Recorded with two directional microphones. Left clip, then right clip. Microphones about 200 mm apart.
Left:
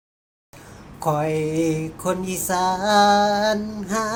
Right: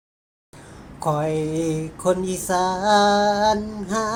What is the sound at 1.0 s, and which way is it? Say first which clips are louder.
Mantra: left 1 dB; 5° right (ahead or behind).